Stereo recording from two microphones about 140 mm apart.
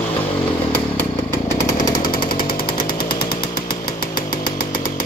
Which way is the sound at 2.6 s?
90° left.